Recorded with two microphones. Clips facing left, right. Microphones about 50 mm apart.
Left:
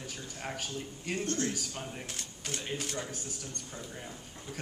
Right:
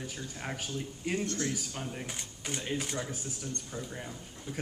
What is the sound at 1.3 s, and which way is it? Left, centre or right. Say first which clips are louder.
Speech: left 1 dB; left.